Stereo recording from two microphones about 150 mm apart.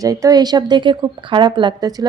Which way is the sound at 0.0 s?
25° right (ahead or behind).